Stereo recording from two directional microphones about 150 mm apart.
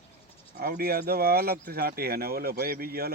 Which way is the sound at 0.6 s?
80° right.